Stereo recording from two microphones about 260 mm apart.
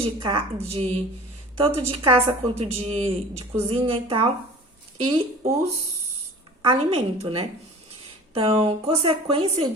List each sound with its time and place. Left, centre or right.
0.0 s speech: centre
6.6 s speech: right